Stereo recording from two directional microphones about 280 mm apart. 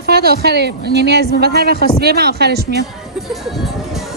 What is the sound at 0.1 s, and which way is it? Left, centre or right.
A woman's voice, right.